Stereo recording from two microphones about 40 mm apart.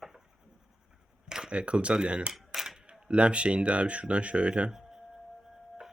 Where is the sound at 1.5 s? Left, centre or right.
Right.